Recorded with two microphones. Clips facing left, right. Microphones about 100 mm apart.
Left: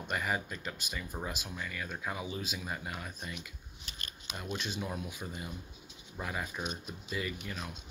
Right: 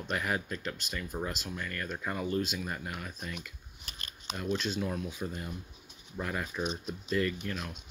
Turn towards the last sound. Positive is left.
turn(degrees=10)  # may be behind; listen again after turning